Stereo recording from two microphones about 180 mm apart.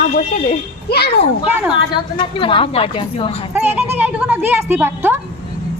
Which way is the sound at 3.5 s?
10° right (ahead or behind).